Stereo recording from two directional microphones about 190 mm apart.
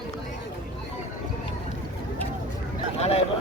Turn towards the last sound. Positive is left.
turn(degrees=35)  # may be behind; listen again after turning